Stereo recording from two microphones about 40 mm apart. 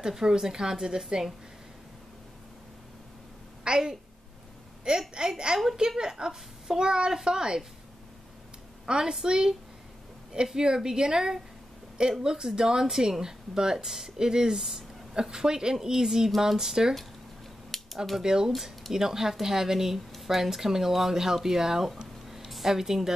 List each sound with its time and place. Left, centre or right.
0.0 s speech: centre
3.6 s a woman's voice: centre
8.8 s a woman's voice: centre
17.7 s a sound: centre
18.2 s speech: centre
18.5 s speech: centre